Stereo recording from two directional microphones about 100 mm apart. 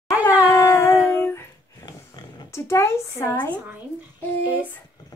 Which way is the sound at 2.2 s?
45° left (ahead or behind).